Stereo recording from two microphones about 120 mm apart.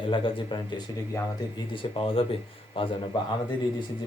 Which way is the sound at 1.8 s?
45° left (ahead or behind).